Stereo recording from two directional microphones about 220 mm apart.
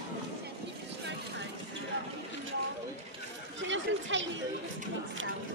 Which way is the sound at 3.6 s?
55° right (ahead or behind).